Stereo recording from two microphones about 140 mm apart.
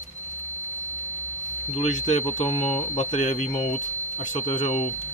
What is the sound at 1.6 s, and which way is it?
Speech, 55° left (ahead or behind).